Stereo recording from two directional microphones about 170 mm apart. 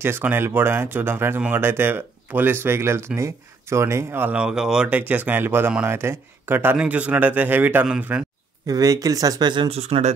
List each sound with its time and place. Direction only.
0.0 s speech: 15° right (ahead or behind)
8.6 s speech: 20° right (ahead or behind); by 10.1 s 40° right (ahead or behind)